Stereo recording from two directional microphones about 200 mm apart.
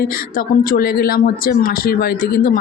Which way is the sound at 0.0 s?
45° left (ahead or behind).